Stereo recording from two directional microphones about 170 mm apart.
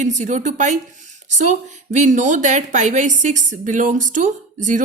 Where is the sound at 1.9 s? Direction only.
45° right (ahead or behind).